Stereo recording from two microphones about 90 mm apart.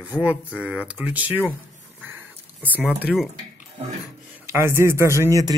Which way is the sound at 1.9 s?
20° right (ahead or behind).